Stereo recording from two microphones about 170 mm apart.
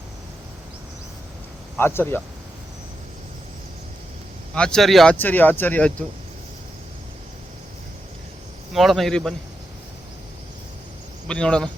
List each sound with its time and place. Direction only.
1.7 s speech: 15° left (ahead or behind)
4.5 s speech: 5° left (ahead or behind)
8.7 s speech: centre (ahead or behind)
11.3 s speech: 5° left (ahead or behind)